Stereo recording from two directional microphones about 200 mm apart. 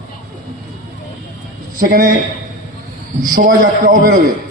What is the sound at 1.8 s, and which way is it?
Speech, 45° right (ahead or behind).